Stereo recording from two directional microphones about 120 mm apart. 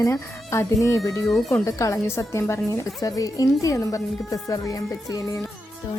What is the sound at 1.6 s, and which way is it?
Speech, 25° left (ahead or behind).